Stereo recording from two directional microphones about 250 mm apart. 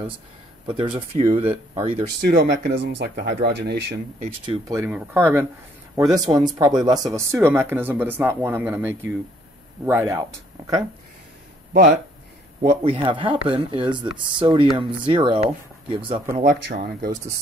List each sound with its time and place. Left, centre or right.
0.7 s speech: right
2.2 s speech: right
4.5 s speech: centre
11.7 s speech: right
12.6 s speech: right
16.4 s speech: right